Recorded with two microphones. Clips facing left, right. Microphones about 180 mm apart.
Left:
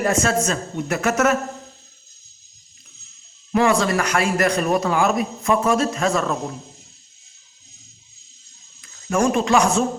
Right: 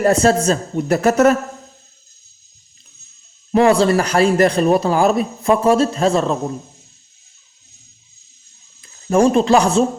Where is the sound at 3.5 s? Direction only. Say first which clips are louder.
Right 5 dB; 30° right (ahead or behind).